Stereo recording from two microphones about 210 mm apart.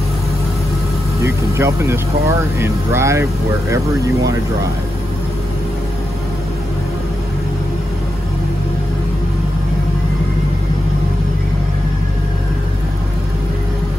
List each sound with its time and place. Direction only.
1.2 s speech: 15° right (ahead or behind)